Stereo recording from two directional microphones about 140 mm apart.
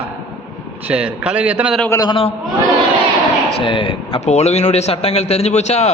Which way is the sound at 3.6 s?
35° left (ahead or behind).